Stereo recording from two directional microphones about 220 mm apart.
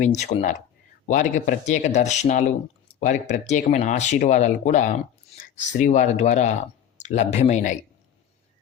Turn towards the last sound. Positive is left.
turn(degrees=35)  # may be behind; listen again after turning